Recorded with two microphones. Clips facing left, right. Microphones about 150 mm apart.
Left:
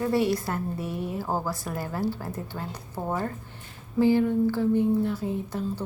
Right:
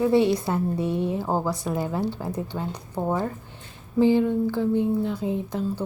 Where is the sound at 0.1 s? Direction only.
25° right (ahead or behind).